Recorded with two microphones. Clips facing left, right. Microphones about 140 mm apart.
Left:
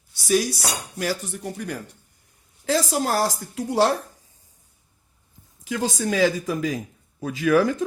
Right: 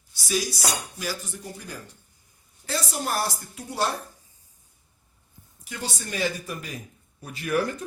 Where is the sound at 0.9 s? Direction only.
70° left (ahead or behind).